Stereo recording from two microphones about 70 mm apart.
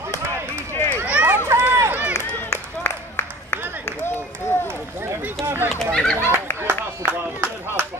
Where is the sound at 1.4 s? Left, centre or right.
Right.